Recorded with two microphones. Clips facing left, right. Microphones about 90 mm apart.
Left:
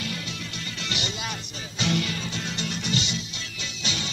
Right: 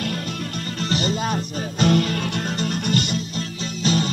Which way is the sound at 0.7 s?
40° right (ahead or behind).